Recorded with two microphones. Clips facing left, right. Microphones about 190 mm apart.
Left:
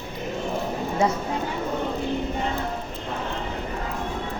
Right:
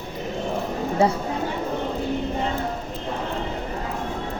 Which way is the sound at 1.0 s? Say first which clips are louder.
Right 3 dB; 30° right (ahead or behind).